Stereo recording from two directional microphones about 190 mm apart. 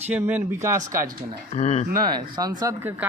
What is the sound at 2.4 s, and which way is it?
Speech, 20° right (ahead or behind).